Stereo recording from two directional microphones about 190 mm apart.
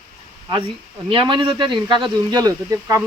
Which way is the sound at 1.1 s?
25° right (ahead or behind).